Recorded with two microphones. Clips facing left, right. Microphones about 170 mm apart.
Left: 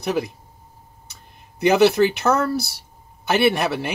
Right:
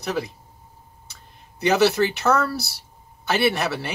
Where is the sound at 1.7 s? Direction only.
15° left (ahead or behind).